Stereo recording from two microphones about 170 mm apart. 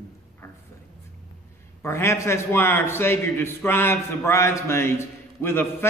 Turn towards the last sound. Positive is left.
turn(degrees=15)  # may be behind; listen again after turning